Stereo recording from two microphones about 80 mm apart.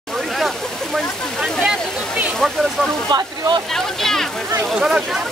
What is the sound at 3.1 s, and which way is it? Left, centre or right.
Speech, right.